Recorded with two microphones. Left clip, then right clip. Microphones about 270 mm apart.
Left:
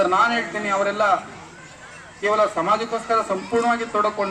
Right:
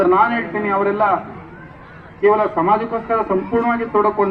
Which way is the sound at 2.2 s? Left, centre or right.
Left.